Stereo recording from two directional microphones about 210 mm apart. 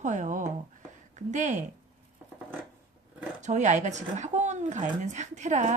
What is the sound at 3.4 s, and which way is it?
A woman's voice, 35° right (ahead or behind).